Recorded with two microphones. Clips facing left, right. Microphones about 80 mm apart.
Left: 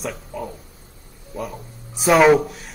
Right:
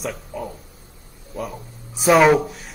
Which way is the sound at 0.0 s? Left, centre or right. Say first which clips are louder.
Even; centre.